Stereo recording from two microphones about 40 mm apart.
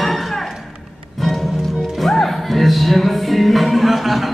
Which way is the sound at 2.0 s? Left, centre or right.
Centre.